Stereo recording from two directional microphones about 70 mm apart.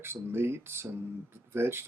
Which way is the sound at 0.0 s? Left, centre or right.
Right.